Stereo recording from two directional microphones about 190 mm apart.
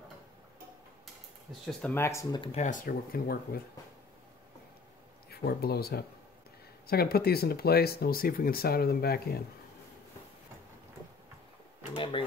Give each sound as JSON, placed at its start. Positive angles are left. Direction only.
{"t": 1.7, "sound": "speech", "side_deg": 10}
{"t": 2.4, "sound": "speech", "side_deg": 35}
{"t": 5.3, "sound": "speech", "side_deg": 55}
{"t": 11.9, "sound": "a sound", "side_deg": 25}